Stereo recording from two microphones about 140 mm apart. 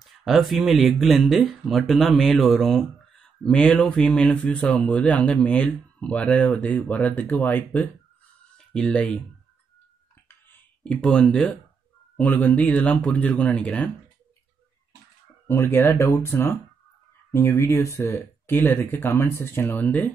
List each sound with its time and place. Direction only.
0.0 s speech: centre (ahead or behind)
10.2 s a sound: 10° left (ahead or behind)
12.2 s speech: 10° left (ahead or behind)
15.4 s speech: 15° left (ahead or behind)